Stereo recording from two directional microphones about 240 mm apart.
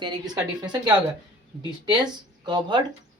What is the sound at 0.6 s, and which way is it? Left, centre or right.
Speech, centre.